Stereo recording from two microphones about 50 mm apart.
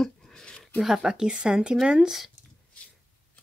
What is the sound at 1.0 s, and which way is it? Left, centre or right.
Speech, centre.